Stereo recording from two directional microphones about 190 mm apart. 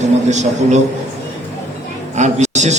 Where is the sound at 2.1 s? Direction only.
40° right (ahead or behind).